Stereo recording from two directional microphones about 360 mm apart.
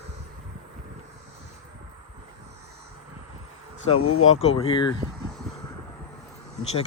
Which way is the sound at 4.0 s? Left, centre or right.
Left.